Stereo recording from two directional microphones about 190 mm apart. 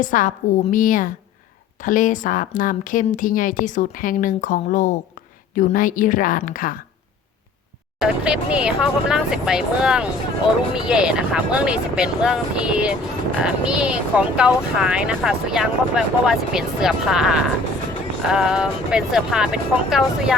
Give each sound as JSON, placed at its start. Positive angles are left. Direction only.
{"t": 0.0, "sound": "speech", "side_deg": 45}
{"t": 7.9, "sound": "speech", "side_deg": -5}